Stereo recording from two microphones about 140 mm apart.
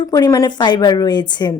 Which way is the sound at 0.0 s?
25° left (ahead or behind).